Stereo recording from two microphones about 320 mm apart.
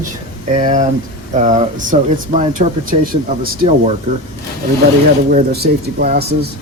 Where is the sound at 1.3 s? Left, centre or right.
Right.